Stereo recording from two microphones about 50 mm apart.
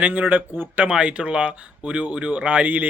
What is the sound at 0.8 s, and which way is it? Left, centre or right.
Speech, right.